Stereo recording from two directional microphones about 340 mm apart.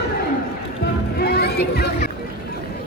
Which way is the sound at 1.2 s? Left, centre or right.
Left.